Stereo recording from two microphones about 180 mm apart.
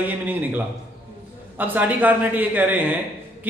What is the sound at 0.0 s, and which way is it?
Speech, 10° right (ahead or behind).